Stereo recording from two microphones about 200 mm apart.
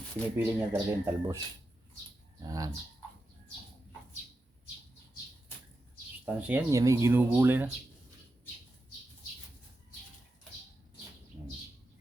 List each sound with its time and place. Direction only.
0.3 s speech: 10° right (ahead or behind)
2.5 s speech: 20° right (ahead or behind)
6.2 s speech: 10° right (ahead or behind)